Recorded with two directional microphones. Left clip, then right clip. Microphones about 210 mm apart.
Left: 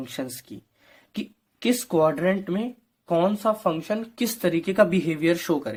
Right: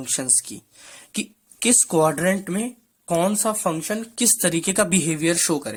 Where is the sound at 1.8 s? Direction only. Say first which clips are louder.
Even; 20° right (ahead or behind).